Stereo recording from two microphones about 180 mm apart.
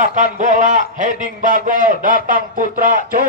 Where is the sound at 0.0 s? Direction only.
45° right (ahead or behind).